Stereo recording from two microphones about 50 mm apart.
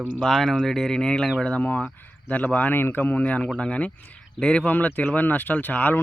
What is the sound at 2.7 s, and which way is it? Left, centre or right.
Speech, left.